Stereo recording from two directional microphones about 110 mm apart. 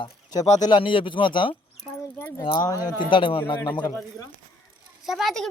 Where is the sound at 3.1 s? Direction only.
50° left (ahead or behind).